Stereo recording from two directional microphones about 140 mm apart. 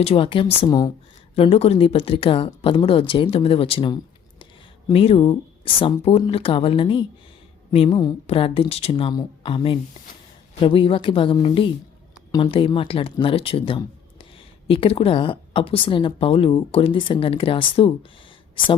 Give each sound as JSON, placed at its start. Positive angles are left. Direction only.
{"t": 0.0, "sound": "speech", "side_deg": 40}